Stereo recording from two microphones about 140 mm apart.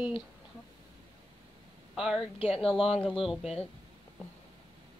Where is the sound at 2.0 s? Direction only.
5° right (ahead or behind).